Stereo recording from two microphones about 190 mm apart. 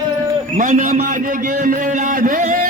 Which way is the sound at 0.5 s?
45° right (ahead or behind).